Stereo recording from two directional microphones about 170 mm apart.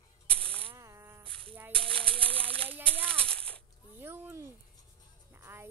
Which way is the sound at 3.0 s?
5° left (ahead or behind).